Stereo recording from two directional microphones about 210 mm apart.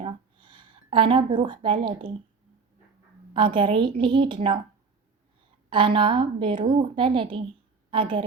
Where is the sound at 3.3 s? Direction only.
25° right (ahead or behind).